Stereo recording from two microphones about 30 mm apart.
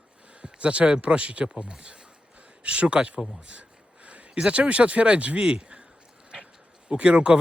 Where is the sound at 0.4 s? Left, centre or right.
Right.